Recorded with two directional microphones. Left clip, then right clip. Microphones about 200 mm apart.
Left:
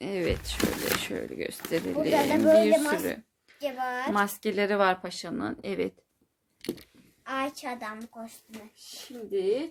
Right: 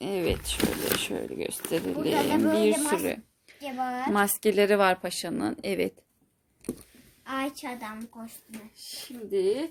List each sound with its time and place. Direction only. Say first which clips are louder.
0.0 s a sound: right 1 dB; 15° right (ahead or behind)
0.4 s speech: right 1 dB; 10° right (ahead or behind)
3.0 s a sound: right 2 dB; 20° right (ahead or behind)
3.6 s a woman's voice: even; 15° left (ahead or behind)
4.1 s speech: right 6 dB; 30° right (ahead or behind)
7.3 s speech: left 1 dB; 5° right (ahead or behind)